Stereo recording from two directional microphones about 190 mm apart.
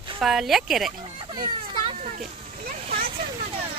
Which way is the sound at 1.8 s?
40° right (ahead or behind).